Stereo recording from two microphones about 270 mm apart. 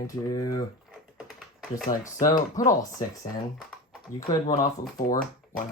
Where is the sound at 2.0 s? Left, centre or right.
Centre.